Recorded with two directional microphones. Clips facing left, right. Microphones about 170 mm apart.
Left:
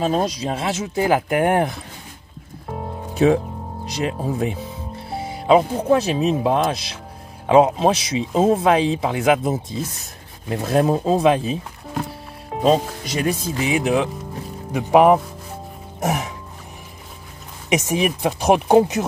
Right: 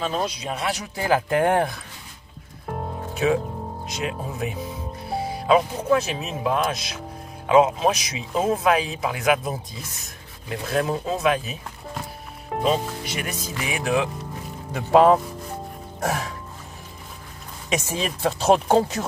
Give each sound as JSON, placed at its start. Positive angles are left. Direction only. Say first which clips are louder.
{"t": 0.0, "sound": "speech", "louder": "left 6 dB", "side_deg": 40}
{"t": 3.8, "sound": "speech", "louder": "left 7 dB", "side_deg": 35}
{"t": 5.1, "sound": "speech", "louder": "left 4 dB", "side_deg": 25}
{"t": 10.5, "sound": "speech", "louder": "left 6 dB", "side_deg": 35}
{"t": 12.6, "sound": "speech", "louder": "left 6 dB", "side_deg": 30}
{"t": 17.6, "sound": "speech", "louder": "left 6 dB", "side_deg": 20}